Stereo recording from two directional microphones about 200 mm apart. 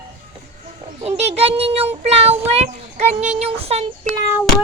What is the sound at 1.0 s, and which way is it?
Speech, 30° right (ahead or behind).